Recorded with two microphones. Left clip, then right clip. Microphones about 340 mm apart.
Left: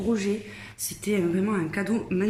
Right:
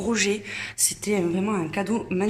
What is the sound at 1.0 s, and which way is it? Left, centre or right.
Speech, centre.